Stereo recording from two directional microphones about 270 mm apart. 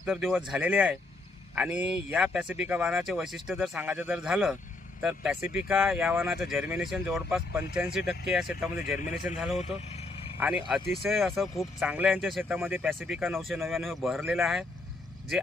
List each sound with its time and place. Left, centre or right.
0.0 s speech: centre
9.0 s a man's voice: left
10.7 s speech: centre